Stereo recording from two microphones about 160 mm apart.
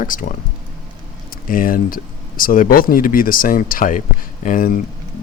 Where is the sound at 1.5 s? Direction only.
60° left (ahead or behind).